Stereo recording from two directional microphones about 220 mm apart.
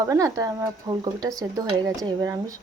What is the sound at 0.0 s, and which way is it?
A woman's voice, 15° right (ahead or behind).